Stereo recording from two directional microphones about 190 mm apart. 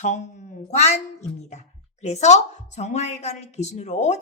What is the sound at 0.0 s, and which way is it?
Speech, 40° left (ahead or behind).